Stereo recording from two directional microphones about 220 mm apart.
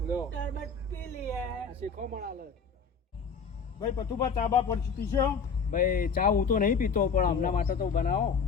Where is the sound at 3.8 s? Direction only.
25° left (ahead or behind).